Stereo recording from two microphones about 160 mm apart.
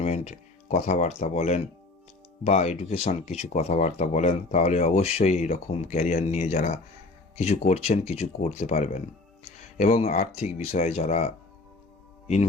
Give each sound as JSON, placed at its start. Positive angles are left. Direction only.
{"t": 0.0, "sound": "speech", "side_deg": 45}
{"t": 10.3, "sound": "speech", "side_deg": 45}